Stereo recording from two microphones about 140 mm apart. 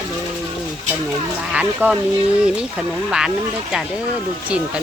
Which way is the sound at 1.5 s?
10° right (ahead or behind).